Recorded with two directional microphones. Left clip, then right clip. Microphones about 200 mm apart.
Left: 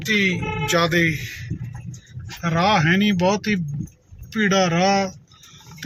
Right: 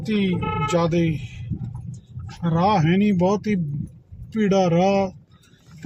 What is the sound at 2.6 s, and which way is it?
Speech, 30° right (ahead or behind).